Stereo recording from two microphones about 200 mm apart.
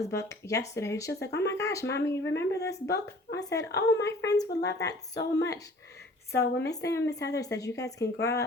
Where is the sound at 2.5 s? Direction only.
55° left (ahead or behind).